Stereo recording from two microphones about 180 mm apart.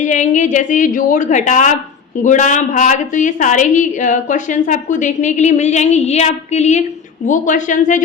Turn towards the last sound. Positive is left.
turn(degrees=45)  # may be behind; listen again after turning